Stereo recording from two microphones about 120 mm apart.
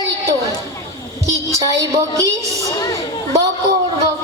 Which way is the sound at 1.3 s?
25° right (ahead or behind).